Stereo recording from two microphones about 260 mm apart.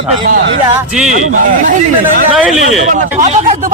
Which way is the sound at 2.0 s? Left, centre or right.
Centre.